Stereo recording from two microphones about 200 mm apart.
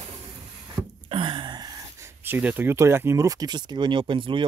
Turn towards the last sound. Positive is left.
turn(degrees=-25)  # may be behind; listen again after turning